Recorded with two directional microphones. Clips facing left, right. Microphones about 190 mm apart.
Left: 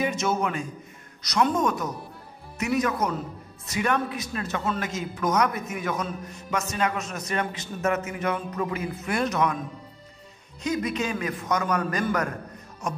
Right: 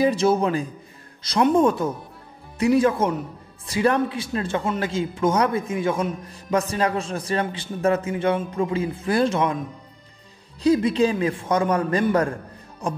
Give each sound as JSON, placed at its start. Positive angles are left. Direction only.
{"t": 0.0, "sound": "a man's voice", "side_deg": -30}
{"t": 10.6, "sound": "a man's voice", "side_deg": -30}